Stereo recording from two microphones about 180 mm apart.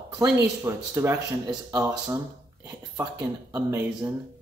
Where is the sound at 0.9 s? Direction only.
20° right (ahead or behind).